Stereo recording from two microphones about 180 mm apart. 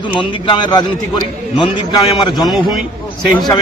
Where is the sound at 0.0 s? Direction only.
25° left (ahead or behind).